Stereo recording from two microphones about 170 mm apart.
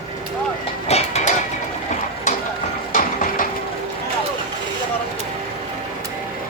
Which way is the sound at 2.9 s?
55° left (ahead or behind).